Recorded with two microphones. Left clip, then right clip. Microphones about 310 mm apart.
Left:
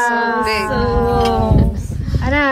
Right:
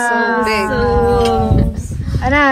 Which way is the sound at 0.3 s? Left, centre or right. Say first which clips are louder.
Right 2 dB; left.